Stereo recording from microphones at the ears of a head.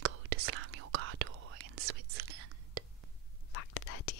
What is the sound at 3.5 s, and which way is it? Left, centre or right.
Whispering, left.